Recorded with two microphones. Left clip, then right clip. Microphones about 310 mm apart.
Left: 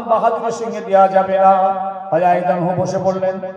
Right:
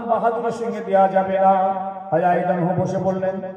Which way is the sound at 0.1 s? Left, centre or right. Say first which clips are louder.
Left 5 dB; left.